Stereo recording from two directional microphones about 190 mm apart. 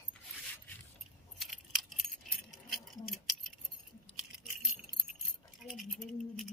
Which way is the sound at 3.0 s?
Centre (ahead or behind).